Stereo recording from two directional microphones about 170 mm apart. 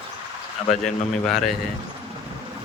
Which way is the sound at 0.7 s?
Centre (ahead or behind).